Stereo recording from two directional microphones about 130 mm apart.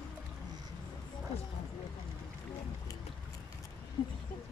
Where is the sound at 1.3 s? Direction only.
55° left (ahead or behind).